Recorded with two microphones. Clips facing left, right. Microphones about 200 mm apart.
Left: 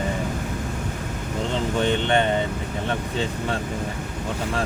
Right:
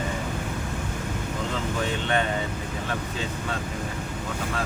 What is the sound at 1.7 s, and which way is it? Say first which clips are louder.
Speech: left 6 dB; 30° left (ahead or behind).